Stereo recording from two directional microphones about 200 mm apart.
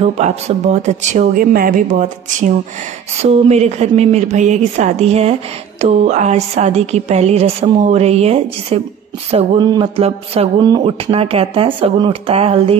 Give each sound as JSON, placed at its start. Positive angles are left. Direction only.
{"t": 0.0, "sound": "speech", "side_deg": -30}